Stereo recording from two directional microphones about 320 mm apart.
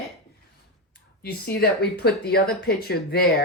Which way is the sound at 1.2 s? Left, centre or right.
Left.